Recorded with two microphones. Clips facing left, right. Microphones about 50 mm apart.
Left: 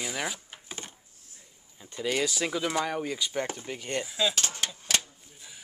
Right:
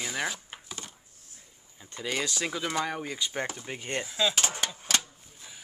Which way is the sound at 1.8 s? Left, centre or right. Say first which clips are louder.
Left 3 dB; centre.